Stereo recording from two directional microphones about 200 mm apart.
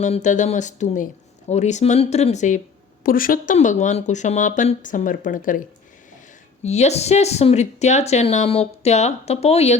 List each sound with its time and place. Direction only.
0.0 s speech: 35° left (ahead or behind)